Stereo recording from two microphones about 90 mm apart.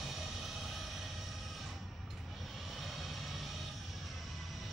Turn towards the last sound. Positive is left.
turn(degrees=0)  # may be behind; listen again after turning